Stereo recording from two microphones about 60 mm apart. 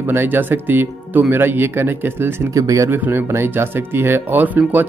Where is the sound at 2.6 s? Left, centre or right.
Right.